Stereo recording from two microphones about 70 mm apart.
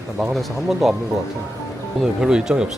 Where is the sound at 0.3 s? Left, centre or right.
Centre.